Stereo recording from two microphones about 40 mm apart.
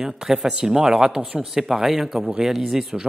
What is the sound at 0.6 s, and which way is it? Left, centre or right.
Speech, centre.